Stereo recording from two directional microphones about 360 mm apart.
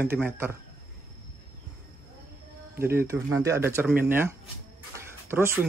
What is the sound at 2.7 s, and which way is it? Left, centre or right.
Speech, centre.